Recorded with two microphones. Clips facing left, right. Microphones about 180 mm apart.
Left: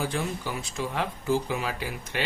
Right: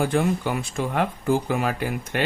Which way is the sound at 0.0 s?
55° right (ahead or behind).